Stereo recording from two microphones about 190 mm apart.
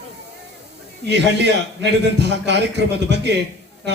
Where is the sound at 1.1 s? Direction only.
65° right (ahead or behind).